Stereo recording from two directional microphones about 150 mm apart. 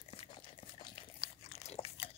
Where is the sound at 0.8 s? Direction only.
40° left (ahead or behind).